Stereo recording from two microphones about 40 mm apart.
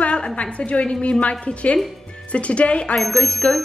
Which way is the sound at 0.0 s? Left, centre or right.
Left.